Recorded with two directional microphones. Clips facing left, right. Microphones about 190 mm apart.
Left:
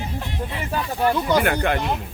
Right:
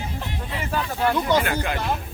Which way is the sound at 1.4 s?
60° left (ahead or behind).